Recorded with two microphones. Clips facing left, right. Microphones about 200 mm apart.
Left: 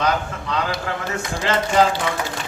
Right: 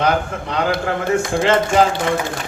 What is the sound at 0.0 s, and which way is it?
Speech, 55° right (ahead or behind).